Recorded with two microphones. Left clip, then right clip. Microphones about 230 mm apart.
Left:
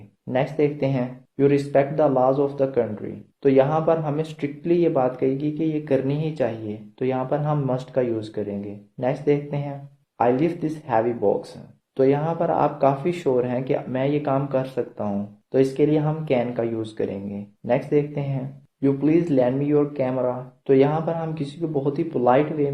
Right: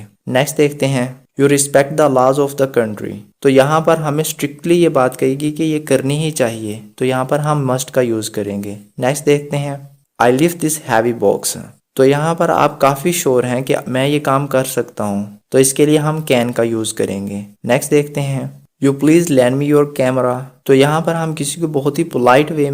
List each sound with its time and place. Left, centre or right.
0.3 s speech: right